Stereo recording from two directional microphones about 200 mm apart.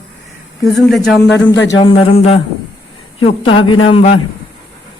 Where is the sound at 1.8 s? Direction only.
30° left (ahead or behind).